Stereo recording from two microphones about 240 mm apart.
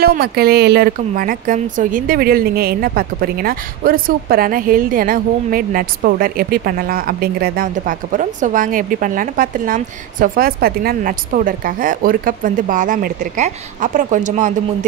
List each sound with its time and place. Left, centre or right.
0.0 s a woman's voice: right